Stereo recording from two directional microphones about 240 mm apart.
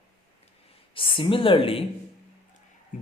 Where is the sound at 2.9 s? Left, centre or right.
Left.